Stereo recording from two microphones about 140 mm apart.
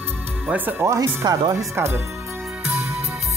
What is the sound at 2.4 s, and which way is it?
Music, 5° right (ahead or behind).